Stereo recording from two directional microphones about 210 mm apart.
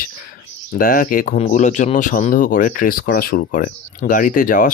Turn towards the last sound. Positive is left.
turn(degrees=40)  # may be behind; listen again after turning